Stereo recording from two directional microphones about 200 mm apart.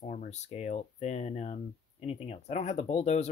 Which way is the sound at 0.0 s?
35° left (ahead or behind).